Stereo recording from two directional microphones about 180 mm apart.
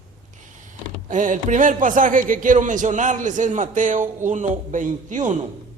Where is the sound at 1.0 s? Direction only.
45° right (ahead or behind).